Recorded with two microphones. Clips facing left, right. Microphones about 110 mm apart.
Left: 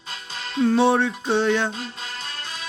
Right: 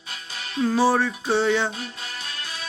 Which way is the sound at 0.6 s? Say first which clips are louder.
Left 2 dB; 5° right (ahead or behind).